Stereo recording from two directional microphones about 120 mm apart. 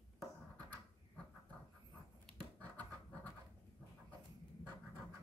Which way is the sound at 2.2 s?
10° left (ahead or behind).